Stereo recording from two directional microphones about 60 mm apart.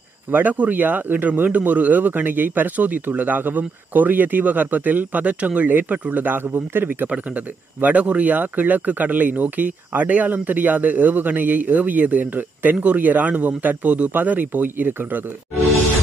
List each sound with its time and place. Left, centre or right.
0.3 s speech: right
7.1 s speech: right